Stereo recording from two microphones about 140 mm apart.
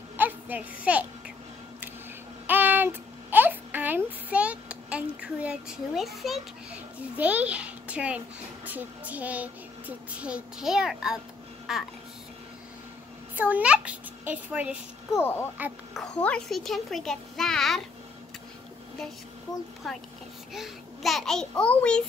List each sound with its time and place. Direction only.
0.2 s a sound: 10° right (ahead or behind)
2.4 s a sound: 15° right (ahead or behind)
8.6 s a child's voice: 10° right (ahead or behind)
13.4 s a child's voice: 10° right (ahead or behind)
15.1 s a child's voice: 15° left (ahead or behind)
19.8 s a child's voice: centre (ahead or behind)